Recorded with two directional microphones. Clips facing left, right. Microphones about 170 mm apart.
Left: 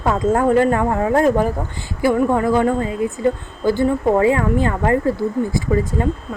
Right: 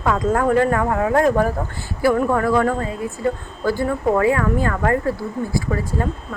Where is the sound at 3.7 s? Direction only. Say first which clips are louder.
Left 3 dB; 25° left (ahead or behind).